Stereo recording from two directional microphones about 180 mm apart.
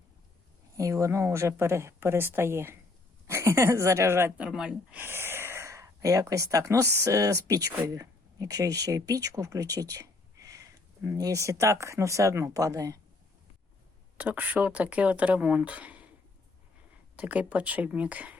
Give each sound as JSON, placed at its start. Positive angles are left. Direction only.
{"t": 0.8, "sound": "speech", "side_deg": -15}
{"t": 14.2, "sound": "speech", "side_deg": -10}
{"t": 17.2, "sound": "speech", "side_deg": -10}